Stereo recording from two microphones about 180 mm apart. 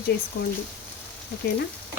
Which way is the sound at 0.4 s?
50° left (ahead or behind).